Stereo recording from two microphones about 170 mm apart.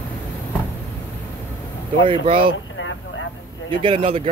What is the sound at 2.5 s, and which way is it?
Vehicle, 90° left.